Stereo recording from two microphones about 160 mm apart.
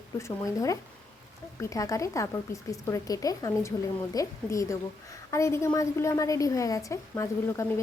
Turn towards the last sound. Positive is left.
turn(degrees=15)  # may be behind; listen again after turning